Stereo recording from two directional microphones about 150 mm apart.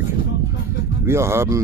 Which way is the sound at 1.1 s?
15° right (ahead or behind).